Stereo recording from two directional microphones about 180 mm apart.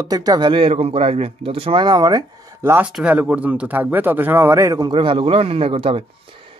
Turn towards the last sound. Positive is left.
turn(degrees=-30)  # may be behind; listen again after turning